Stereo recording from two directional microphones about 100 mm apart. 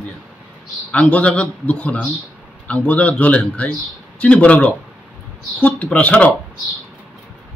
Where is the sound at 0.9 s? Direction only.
15° left (ahead or behind).